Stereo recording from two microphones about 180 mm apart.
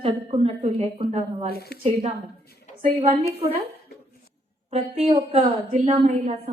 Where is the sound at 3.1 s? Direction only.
30° right (ahead or behind).